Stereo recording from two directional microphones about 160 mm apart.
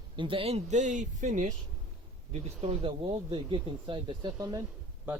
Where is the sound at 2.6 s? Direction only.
35° right (ahead or behind).